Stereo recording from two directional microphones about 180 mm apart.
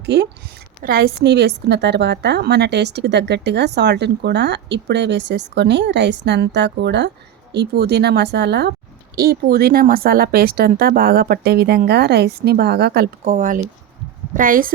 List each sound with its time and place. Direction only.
0.0 s a woman's voice: 70° right (ahead or behind)
0.8 s a woman's voice: 55° right (ahead or behind)